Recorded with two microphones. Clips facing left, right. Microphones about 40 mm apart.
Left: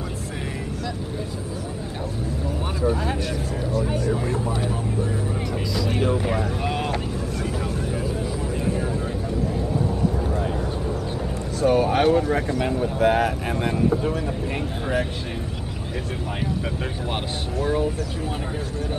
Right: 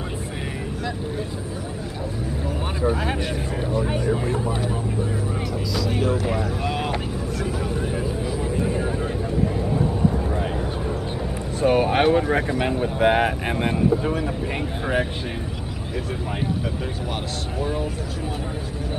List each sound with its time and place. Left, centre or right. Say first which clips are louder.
3.7 s speech: right 1 dB; right
5.8 s speech: even; centre
7.6 s vehicle: right 1 dB; centre
11.6 s speech: even; right
14.0 s speech: right 1 dB; centre